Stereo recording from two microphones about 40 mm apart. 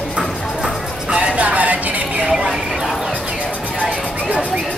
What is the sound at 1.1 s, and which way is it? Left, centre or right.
Music, right.